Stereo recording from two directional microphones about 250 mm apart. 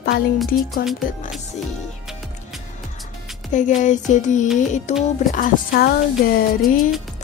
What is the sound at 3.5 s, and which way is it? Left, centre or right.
Music, left.